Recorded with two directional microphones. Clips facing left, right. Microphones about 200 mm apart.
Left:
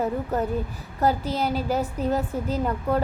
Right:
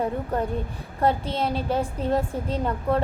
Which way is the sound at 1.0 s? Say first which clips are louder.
Even; 30° right (ahead or behind).